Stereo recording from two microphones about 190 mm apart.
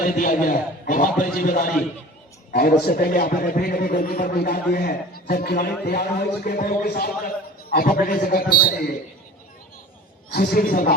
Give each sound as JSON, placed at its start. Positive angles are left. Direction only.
{"t": 0.0, "sound": "a man's voice", "side_deg": 45}
{"t": 10.3, "sound": "a man's voice", "side_deg": 50}